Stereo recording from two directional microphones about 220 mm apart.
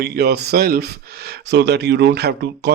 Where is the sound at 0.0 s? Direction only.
45° right (ahead or behind).